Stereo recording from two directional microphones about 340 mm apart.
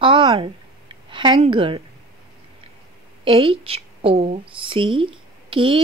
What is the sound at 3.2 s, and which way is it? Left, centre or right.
A woman's voice, centre.